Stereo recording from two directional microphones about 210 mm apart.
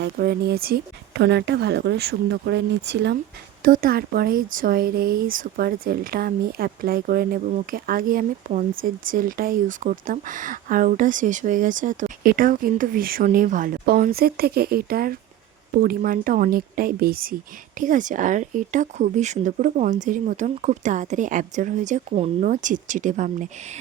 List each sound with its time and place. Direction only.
0.0 s speech: 50° right (ahead or behind)
3.6 s speech: 45° right (ahead or behind)